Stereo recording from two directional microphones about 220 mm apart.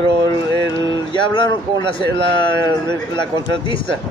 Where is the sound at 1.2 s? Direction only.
20° left (ahead or behind).